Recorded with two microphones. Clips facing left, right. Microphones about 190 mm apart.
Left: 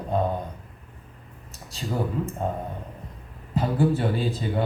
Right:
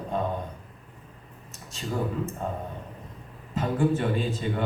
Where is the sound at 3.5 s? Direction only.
35° left (ahead or behind).